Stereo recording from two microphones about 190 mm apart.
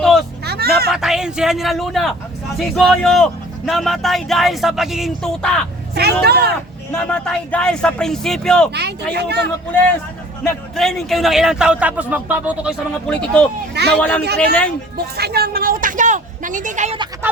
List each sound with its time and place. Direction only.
0.0 s vehicle: centre (ahead or behind)
0.4 s a sound: 55° right (ahead or behind)
0.9 s speech: centre (ahead or behind)
5.9 s speech: 60° right (ahead or behind)
6.9 s speech: 5° left (ahead or behind)
8.7 s speech: 60° right (ahead or behind)
10.8 s speech: centre (ahead or behind)
13.1 s speech: 5° left (ahead or behind)
14.9 s speech: 55° right (ahead or behind); by 17.0 s 40° right (ahead or behind)